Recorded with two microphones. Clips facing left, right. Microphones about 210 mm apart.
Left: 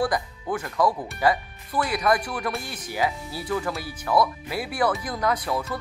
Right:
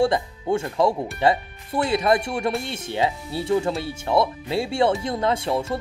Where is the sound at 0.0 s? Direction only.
25° right (ahead or behind).